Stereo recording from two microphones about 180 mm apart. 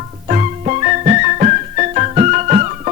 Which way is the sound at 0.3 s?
40° right (ahead or behind).